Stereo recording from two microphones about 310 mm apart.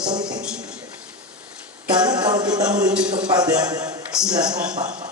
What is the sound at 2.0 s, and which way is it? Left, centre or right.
Music, centre.